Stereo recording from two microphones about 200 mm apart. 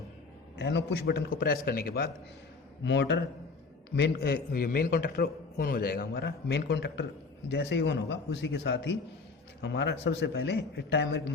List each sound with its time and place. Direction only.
0.6 s a man's voice: 60° left (ahead or behind)
2.8 s a man's voice: 60° left (ahead or behind)